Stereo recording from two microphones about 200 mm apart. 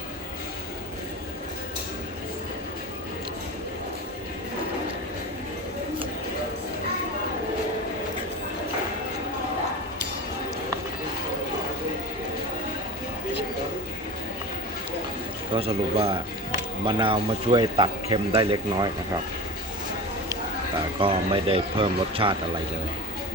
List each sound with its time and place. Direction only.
15.5 s speech: 30° right (ahead or behind)
20.3 s speech: 25° right (ahead or behind)